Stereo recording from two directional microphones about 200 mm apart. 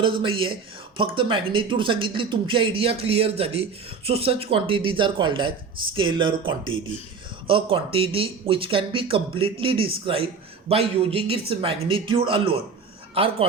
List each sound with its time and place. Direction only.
0.0 s speech: 25° right (ahead or behind)
7.4 s speech: 25° right (ahead or behind)